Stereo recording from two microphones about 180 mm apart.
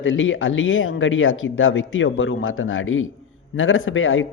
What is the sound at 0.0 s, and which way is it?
Speech, 90° left.